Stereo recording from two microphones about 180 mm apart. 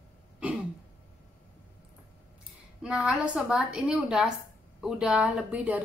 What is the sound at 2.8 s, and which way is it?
A woman's voice, 5° right (ahead or behind).